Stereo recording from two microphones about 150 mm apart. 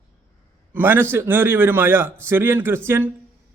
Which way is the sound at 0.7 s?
15° right (ahead or behind).